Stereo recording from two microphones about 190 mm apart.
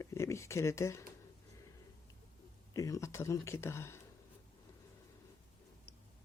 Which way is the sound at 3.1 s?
15° left (ahead or behind).